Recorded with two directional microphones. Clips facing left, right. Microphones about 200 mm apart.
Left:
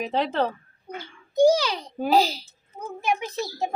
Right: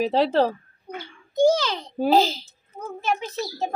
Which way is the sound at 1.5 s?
10° left (ahead or behind).